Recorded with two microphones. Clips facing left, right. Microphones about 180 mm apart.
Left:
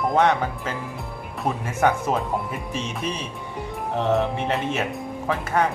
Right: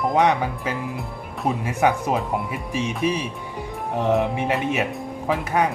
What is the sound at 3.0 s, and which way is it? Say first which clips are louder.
Speech: right 6 dB; 10° right (ahead or behind).